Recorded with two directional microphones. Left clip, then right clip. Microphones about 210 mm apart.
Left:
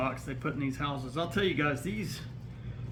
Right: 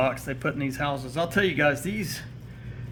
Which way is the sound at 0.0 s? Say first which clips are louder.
Right 8 dB; 50° right (ahead or behind).